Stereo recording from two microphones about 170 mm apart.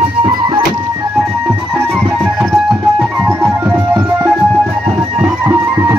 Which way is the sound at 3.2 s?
15° right (ahead or behind).